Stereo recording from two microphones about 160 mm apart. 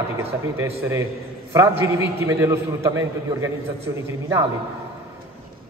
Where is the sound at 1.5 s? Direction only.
15° right (ahead or behind).